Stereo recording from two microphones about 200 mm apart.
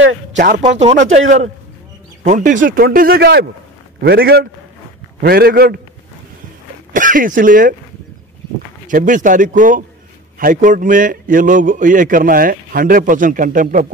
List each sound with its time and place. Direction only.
0.6 s a man's voice: 35° right (ahead or behind); by 5.8 s 50° right (ahead or behind)
6.9 s speech: 40° right (ahead or behind)
8.8 s a man's voice: 40° right (ahead or behind)